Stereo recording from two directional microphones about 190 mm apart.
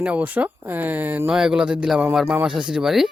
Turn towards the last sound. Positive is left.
turn(degrees=0)  # may be behind; listen again after turning